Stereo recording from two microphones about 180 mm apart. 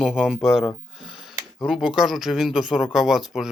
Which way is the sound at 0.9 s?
Centre (ahead or behind).